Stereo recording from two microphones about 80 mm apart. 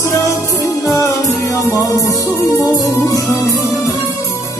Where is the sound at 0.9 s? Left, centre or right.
Left.